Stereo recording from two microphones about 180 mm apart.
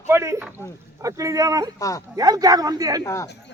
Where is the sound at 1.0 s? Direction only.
20° right (ahead or behind).